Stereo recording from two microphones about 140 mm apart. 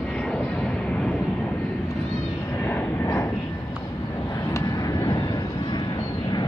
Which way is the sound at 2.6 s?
15° left (ahead or behind).